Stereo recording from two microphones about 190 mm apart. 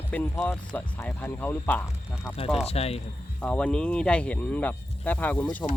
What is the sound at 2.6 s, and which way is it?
Speech, 30° left (ahead or behind).